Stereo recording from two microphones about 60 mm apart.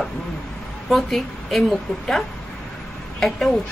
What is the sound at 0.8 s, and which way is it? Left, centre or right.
A woman's voice, centre.